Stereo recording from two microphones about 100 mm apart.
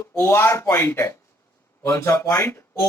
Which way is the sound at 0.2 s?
25° left (ahead or behind).